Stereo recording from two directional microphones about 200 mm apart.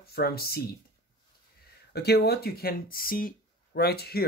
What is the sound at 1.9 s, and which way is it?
Speech, 55° left (ahead or behind).